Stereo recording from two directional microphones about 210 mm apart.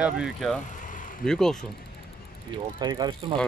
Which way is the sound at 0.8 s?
40° left (ahead or behind).